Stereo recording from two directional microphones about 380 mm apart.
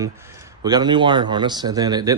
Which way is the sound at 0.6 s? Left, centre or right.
Centre.